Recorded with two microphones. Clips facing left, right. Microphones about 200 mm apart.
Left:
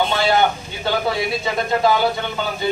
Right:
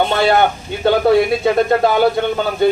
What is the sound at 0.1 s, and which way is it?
Speech, 60° right (ahead or behind).